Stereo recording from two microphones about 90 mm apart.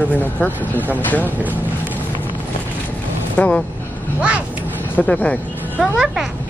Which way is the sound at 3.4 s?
15° left (ahead or behind).